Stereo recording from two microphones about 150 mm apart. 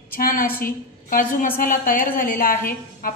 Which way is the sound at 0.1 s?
75° left (ahead or behind).